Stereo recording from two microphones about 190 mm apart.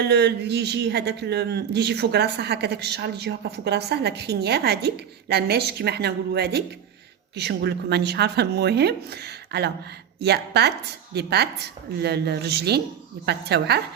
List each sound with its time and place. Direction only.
0.0 s a man's voice: 60° right (ahead or behind)